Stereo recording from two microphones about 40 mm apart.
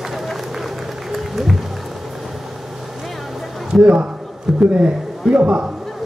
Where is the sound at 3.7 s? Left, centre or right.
Centre.